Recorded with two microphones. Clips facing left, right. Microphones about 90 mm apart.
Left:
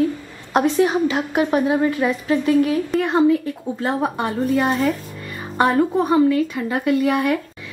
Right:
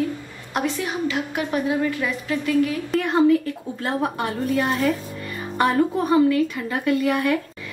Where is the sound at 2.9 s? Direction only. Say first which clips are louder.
Left 1 dB; centre (ahead or behind).